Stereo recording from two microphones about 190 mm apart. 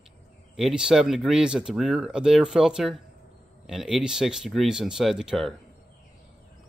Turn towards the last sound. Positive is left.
turn(degrees=0)  # may be behind; listen again after turning